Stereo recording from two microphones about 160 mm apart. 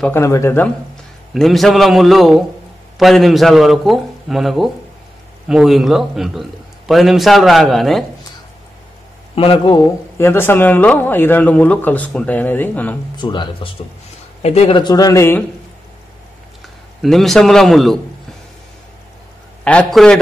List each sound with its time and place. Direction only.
0.0 s speech: 15° left (ahead or behind)
1.3 s a man's voice: centre (ahead or behind)
9.3 s speech: 35° left (ahead or behind)
9.7 s speech: 15° left (ahead or behind)
13.1 s speech: 30° left (ahead or behind)
14.4 s speech: 40° left (ahead or behind)
14.8 s speech: 25° left (ahead or behind)
17.0 s a man's voice: centre (ahead or behind)
19.6 s speech: 5° left (ahead or behind)